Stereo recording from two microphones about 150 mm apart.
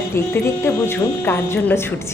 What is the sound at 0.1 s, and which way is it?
Speech, 15° left (ahead or behind).